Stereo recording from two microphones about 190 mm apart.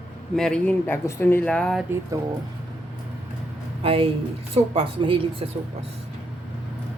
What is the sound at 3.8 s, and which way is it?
Speech, 30° right (ahead or behind).